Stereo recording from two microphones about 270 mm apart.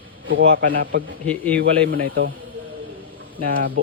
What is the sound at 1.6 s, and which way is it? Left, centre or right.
Speech, right.